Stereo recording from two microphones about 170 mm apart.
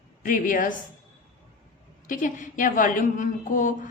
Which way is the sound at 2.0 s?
50° left (ahead or behind).